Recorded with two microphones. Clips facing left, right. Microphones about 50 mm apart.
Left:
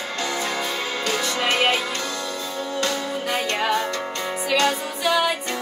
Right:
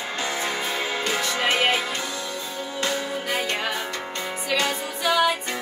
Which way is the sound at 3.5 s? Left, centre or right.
Centre.